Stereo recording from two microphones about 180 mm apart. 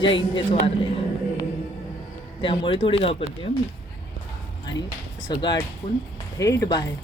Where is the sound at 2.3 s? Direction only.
30° left (ahead or behind).